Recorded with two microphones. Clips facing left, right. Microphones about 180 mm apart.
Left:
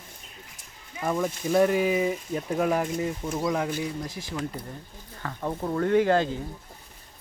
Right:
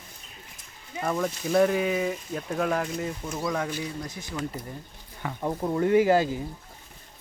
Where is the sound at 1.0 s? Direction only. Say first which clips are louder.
Left 1 dB; 10° left (ahead or behind).